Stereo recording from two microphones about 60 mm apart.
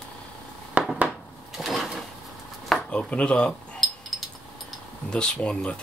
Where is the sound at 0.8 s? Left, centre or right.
Right.